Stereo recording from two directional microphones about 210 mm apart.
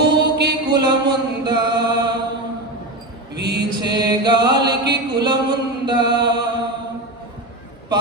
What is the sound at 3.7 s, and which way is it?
Chant, 20° right (ahead or behind).